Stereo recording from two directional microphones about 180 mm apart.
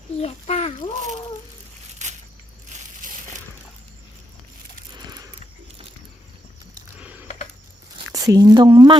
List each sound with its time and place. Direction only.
0.2 s a child's voice: 35° left (ahead or behind)
2.0 s a sound: 40° right (ahead or behind)
7.0 s computer keyboard: 10° right (ahead or behind)
7.9 s a woman's voice: 20° right (ahead or behind)